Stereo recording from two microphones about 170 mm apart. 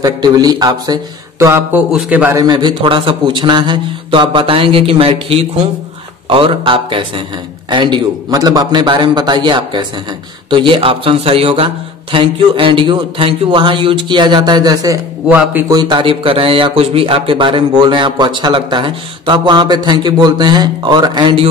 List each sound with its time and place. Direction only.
0.0 s a man's voice: 25° right (ahead or behind); by 2.3 s 10° right (ahead or behind)
2.3 s a man's voice: 25° right (ahead or behind)
15.2 s a man's voice: 10° right (ahead or behind)
15.7 s speech: 25° right (ahead or behind)